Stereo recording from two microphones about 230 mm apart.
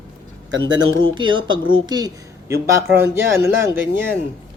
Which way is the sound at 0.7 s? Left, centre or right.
Right.